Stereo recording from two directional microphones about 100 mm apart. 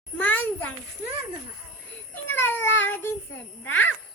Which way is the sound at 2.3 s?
20° left (ahead or behind).